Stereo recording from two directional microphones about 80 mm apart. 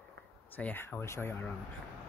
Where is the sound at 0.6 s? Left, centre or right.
Centre.